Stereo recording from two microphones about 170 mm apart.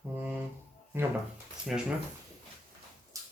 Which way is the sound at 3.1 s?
20° right (ahead or behind).